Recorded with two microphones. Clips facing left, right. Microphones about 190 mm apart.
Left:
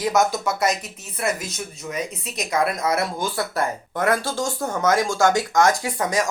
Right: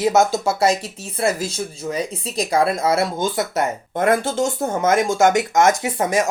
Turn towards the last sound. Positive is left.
turn(degrees=-25)  # may be behind; listen again after turning